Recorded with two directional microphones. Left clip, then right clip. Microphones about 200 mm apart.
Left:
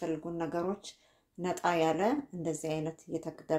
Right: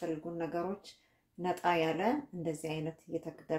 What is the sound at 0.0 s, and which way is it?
Speech, 35° left (ahead or behind).